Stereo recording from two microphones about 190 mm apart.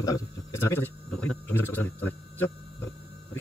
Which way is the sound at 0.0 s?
15° left (ahead or behind).